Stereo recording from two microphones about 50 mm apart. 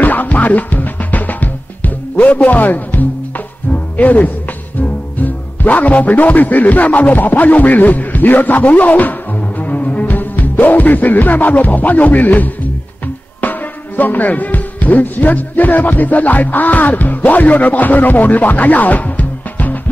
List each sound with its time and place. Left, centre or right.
0.0 s music: left
4.7 s speech: left
9.6 s music: left
13.4 s speech: left